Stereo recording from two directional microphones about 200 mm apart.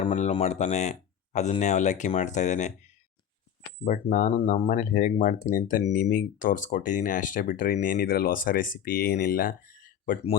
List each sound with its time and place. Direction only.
0.0 s speech: 35° left (ahead or behind)
3.8 s speech: 40° left (ahead or behind)